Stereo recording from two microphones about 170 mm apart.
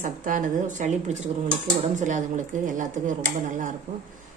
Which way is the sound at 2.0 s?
45° right (ahead or behind).